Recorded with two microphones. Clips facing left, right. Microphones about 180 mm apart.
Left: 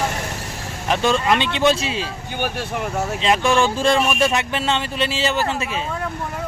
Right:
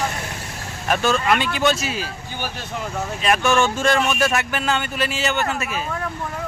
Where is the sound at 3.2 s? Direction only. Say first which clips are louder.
Even; 25° left (ahead or behind).